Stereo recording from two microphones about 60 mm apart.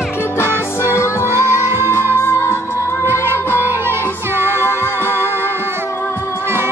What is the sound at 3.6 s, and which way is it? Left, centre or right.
Music, right.